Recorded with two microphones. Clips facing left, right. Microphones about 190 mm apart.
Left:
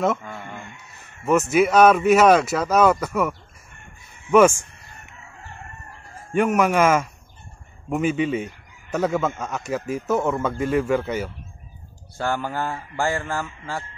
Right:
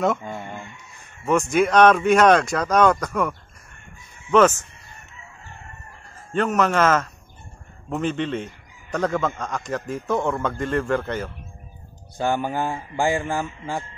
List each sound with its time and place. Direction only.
0.2 s chicken: 20° right (ahead or behind)
1.2 s speech: 5° left (ahead or behind)
6.3 s speech: 10° left (ahead or behind)
12.2 s speech: 20° right (ahead or behind)